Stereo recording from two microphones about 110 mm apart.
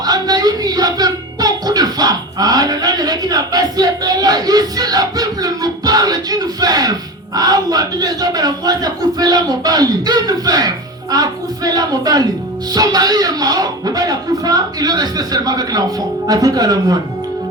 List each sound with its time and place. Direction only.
0.0 s speech: 35° right (ahead or behind)